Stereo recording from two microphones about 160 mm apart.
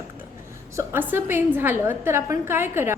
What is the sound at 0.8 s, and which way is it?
A woman's voice, 15° right (ahead or behind).